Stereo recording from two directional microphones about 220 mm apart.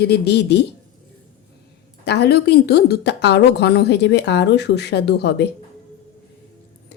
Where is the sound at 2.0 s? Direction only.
50° left (ahead or behind).